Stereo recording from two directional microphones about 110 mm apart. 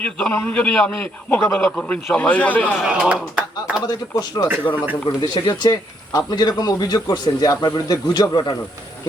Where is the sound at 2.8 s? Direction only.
10° right (ahead or behind).